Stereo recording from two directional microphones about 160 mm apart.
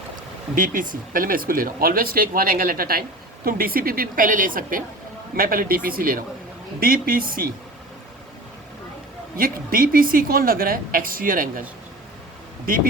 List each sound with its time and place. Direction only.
0.5 s speech: 55° right (ahead or behind)
9.4 s speech: 65° right (ahead or behind)
12.6 s speech: 60° right (ahead or behind)